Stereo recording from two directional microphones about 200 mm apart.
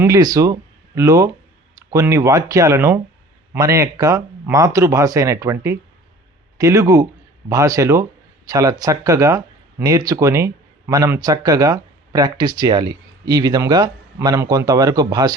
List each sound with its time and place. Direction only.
0.0 s speech: 15° right (ahead or behind)